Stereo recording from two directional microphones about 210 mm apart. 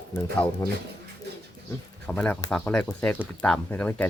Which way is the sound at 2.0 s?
5° left (ahead or behind).